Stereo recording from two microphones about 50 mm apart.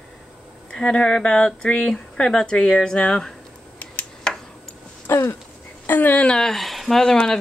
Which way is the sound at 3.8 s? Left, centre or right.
Left.